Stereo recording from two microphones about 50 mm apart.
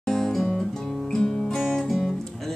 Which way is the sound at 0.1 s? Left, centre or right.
Centre.